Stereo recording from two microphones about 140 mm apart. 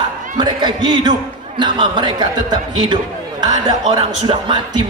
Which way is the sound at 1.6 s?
35° right (ahead or behind).